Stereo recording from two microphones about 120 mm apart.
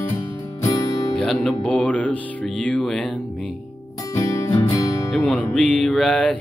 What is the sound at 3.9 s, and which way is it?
Music, 25° left (ahead or behind).